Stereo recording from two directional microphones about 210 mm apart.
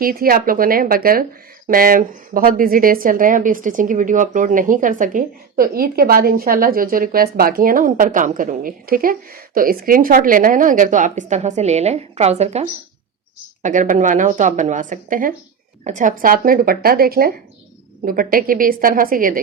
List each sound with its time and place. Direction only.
0.0 s speech: 45° right (ahead or behind)